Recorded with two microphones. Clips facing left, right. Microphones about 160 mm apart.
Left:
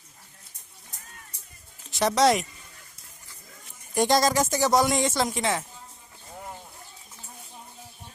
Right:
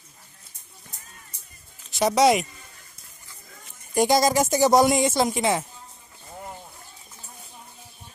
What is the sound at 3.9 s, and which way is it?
Speech, 5° right (ahead or behind).